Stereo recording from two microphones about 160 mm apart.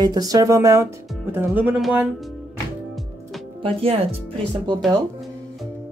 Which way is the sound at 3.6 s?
35° right (ahead or behind).